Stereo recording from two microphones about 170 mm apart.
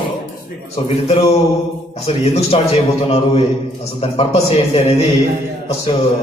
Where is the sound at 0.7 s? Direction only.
35° left (ahead or behind).